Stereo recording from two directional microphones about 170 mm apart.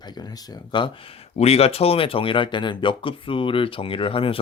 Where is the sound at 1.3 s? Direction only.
35° left (ahead or behind).